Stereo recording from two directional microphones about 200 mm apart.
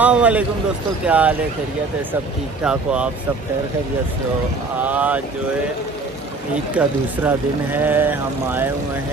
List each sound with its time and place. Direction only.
0.0 s a man's voice: 5° right (ahead or behind)
2.6 s speech: 5° right (ahead or behind)
4.8 s speech: 10° right (ahead or behind)
6.5 s speech: 5° right (ahead or behind)